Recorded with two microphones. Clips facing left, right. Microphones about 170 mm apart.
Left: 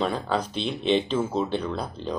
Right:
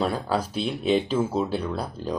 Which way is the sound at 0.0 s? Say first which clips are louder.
Right 1 dB; 5° right (ahead or behind).